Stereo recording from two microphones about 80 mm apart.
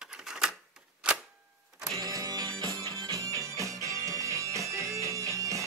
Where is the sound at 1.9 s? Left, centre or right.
Right.